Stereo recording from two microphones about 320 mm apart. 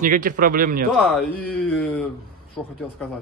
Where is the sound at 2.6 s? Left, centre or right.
Centre.